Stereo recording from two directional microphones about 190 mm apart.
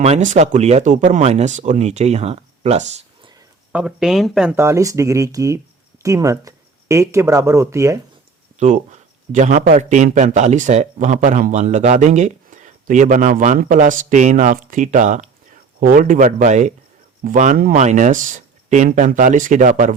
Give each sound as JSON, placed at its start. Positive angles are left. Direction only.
{"t": 0.0, "sound": "a man's voice", "side_deg": -35}
{"t": 3.7, "sound": "speech", "side_deg": -5}
{"t": 4.5, "sound": "speech", "side_deg": -15}
{"t": 8.5, "sound": "a man's voice", "side_deg": -40}